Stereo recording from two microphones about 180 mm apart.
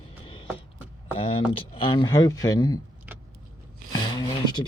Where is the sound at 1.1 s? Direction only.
30° left (ahead or behind).